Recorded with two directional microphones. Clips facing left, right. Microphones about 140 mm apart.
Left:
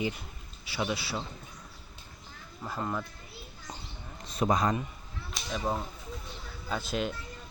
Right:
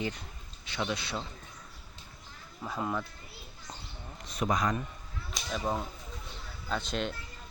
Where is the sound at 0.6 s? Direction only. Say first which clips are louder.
Left 2 dB; 5° left (ahead or behind).